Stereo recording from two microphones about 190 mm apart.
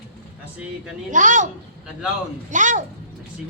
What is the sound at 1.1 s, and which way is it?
A child's voice, 40° right (ahead or behind).